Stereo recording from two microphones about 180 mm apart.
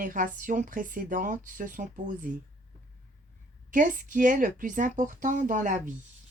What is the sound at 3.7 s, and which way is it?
Speech, 45° right (ahead or behind).